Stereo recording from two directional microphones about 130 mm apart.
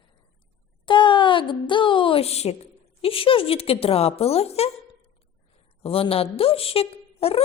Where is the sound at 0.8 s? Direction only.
40° left (ahead or behind).